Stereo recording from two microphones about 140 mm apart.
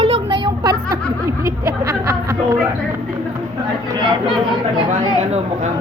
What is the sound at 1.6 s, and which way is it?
Speech, 20° right (ahead or behind).